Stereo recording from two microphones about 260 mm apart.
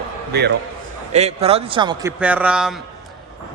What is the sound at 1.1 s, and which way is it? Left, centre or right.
A man's voice, right.